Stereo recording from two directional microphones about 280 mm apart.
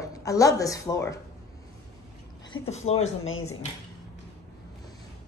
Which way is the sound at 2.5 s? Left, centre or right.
Left.